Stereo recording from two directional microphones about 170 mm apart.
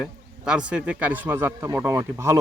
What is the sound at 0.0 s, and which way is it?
A man's voice, 5° right (ahead or behind).